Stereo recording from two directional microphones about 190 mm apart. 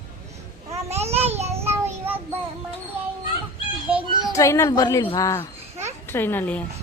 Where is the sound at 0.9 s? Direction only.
35° right (ahead or behind).